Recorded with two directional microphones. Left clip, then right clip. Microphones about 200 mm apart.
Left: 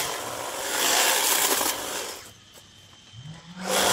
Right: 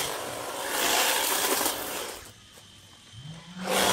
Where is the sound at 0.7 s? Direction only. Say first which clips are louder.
Left 3 dB; 15° left (ahead or behind).